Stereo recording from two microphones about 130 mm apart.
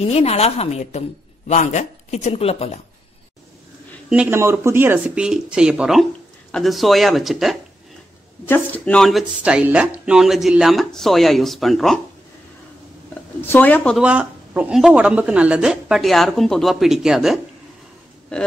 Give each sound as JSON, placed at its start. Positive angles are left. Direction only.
{"t": 0.0, "sound": "speech", "side_deg": 55}
{"t": 4.3, "sound": "speech", "side_deg": -20}
{"t": 8.5, "sound": "speech", "side_deg": 15}
{"t": 9.0, "sound": "speech", "side_deg": -5}
{"t": 13.5, "sound": "speech", "side_deg": 15}
{"t": 13.9, "sound": "speech", "side_deg": -10}